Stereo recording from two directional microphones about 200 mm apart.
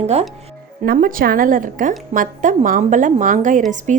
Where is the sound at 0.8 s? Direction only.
45° right (ahead or behind).